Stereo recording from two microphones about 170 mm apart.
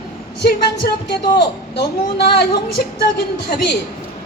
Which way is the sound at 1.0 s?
80° left.